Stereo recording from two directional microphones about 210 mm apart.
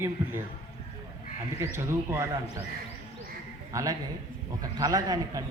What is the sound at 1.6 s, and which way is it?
Speech, 10° right (ahead or behind).